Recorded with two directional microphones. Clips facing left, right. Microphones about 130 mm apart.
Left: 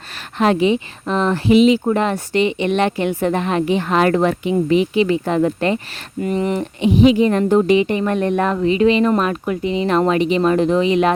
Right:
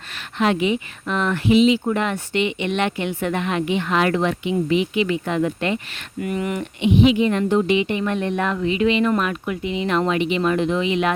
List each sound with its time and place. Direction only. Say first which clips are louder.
0.3 s speech: left 4 dB; 35° left (ahead or behind)
1.5 s speech: left 4 dB; 45° left (ahead or behind)